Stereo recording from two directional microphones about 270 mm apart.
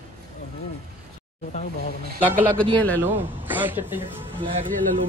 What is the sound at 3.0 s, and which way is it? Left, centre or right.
Speech, centre.